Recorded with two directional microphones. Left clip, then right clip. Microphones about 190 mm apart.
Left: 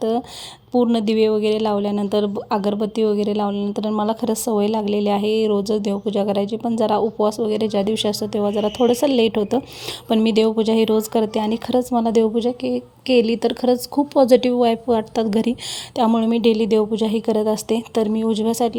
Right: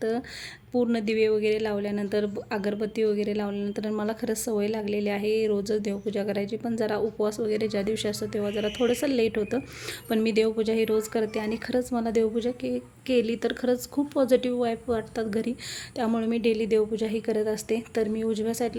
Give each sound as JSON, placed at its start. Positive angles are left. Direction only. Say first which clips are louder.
{"t": 0.7, "sound": "a woman's voice", "louder": "left 7 dB", "side_deg": 30}